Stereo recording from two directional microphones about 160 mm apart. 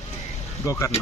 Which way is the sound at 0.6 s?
20° left (ahead or behind).